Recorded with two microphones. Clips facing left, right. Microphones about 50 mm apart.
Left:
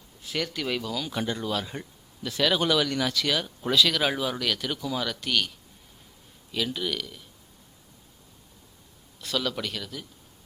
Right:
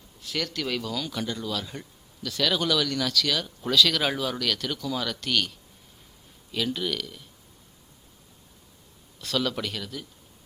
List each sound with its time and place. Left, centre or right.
0.2 s speech: centre
1.1 s speech: left; by 5.5 s centre
6.5 s speech: centre
9.2 s speech: centre